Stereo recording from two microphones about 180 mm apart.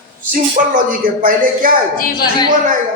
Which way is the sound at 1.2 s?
50° right (ahead or behind).